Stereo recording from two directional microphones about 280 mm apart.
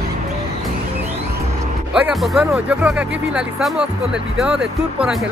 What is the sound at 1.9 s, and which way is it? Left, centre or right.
Speech, centre.